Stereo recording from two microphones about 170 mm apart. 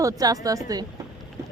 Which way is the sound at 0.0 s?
20° right (ahead or behind).